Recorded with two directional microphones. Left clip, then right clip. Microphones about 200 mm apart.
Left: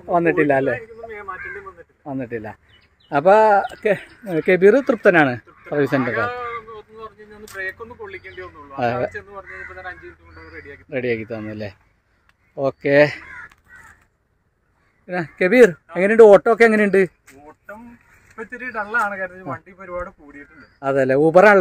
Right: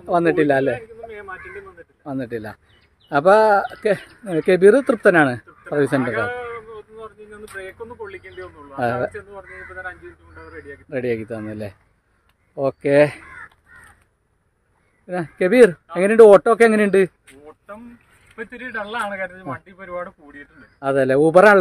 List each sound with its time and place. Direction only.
0.0 s a sound: 10° right (ahead or behind)
2.0 s speech: 10° right (ahead or behind)
6.1 s a sound: 15° right (ahead or behind)
7.5 s speech: 15° right (ahead or behind)
8.7 s speech: centre (ahead or behind)
9.1 s speech: 15° right (ahead or behind)
10.9 s speech: centre (ahead or behind)
15.0 s speech: centre (ahead or behind)
18.4 s speech: 15° right (ahead or behind)
20.9 s speech: centre (ahead or behind)